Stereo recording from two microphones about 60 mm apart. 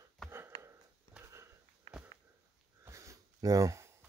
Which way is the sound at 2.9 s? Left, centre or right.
Right.